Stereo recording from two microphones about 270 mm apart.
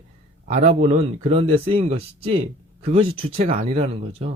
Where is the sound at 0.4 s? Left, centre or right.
Right.